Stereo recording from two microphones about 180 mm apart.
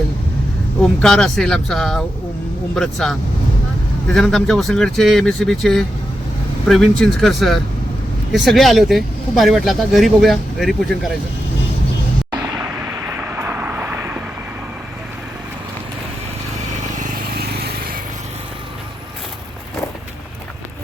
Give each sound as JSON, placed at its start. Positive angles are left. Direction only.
{"t": 0.8, "sound": "speech", "side_deg": 5}
{"t": 12.5, "sound": "vehicle", "side_deg": -10}
{"t": 17.0, "sound": "vehicle", "side_deg": -60}